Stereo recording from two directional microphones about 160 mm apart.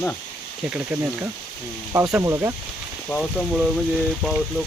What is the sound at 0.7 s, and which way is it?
Speech, 10° right (ahead or behind).